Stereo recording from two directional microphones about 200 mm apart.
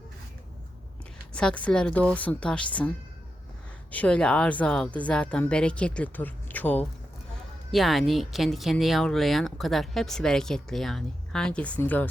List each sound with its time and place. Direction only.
1.3 s a woman's voice: 5° left (ahead or behind)
3.9 s a woman's voice: 5° left (ahead or behind)